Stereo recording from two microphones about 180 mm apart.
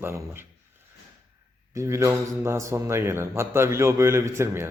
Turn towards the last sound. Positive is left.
turn(degrees=-15)  # may be behind; listen again after turning